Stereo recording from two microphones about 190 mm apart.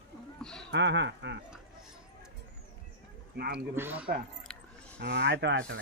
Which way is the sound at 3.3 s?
60° right (ahead or behind).